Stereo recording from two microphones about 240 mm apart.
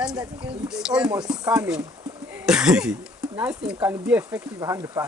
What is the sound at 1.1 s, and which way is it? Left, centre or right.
Speech, centre.